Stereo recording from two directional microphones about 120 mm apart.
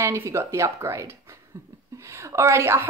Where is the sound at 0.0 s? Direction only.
25° right (ahead or behind).